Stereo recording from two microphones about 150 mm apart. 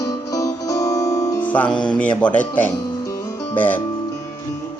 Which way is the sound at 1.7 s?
5° left (ahead or behind).